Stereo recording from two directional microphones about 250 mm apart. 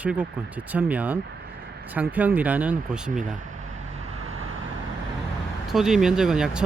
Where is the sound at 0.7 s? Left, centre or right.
Centre.